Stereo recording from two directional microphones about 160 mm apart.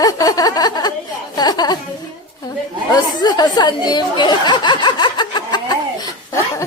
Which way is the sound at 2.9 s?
25° left (ahead or behind).